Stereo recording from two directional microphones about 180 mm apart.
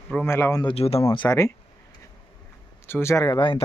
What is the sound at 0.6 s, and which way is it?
Speech, 30° left (ahead or behind).